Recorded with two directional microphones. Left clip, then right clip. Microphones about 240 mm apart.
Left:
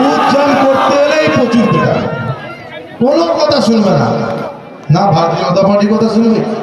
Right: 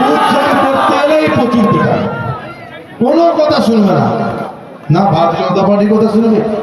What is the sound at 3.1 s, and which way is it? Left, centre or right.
A man's voice, left.